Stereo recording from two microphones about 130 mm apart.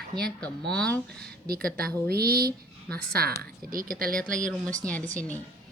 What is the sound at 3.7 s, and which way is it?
Speech, 90° right.